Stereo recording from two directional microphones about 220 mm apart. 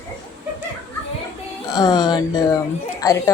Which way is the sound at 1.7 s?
20° left (ahead or behind).